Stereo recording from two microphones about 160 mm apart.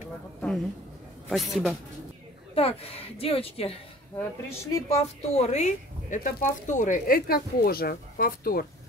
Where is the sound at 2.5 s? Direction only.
35° left (ahead or behind).